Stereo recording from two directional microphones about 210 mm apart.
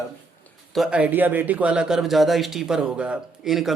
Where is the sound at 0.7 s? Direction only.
5° right (ahead or behind).